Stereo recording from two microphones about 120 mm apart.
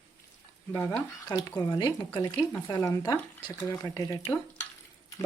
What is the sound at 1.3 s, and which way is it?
Speech, 35° left (ahead or behind).